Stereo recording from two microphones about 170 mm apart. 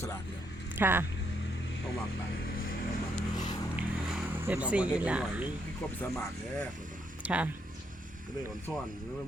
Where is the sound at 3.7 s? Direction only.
5° right (ahead or behind).